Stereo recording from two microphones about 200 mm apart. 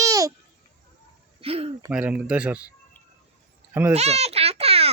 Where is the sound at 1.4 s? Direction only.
30° right (ahead or behind).